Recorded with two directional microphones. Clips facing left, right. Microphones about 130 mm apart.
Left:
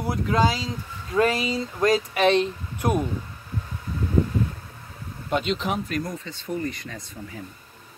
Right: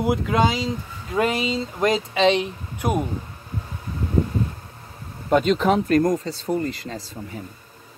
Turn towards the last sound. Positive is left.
turn(degrees=-30)  # may be behind; listen again after turning